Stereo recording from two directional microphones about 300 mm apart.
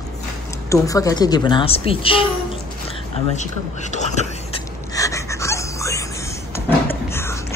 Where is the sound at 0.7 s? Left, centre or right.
Centre.